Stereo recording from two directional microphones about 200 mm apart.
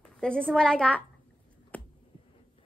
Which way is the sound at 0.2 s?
5° left (ahead or behind).